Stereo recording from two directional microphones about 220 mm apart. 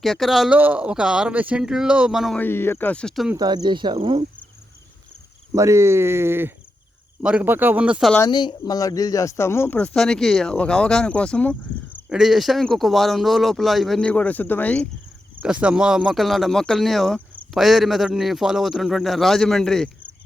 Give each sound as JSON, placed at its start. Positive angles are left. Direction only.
{"t": 0.0, "sound": "speech", "side_deg": 0}
{"t": 3.3, "sound": "speech", "side_deg": -20}
{"t": 5.5, "sound": "speech", "side_deg": -15}
{"t": 8.1, "sound": "speech", "side_deg": 15}
{"t": 15.4, "sound": "speech", "side_deg": -5}